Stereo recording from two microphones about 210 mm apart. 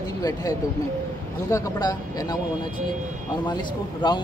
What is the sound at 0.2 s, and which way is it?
Speech, 15° left (ahead or behind).